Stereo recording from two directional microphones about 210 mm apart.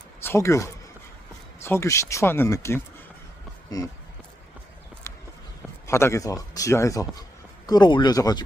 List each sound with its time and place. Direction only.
0.2 s a man's voice: 15° left (ahead or behind)
5.1 s run: 15° left (ahead or behind)
5.9 s a man's voice: 15° left (ahead or behind)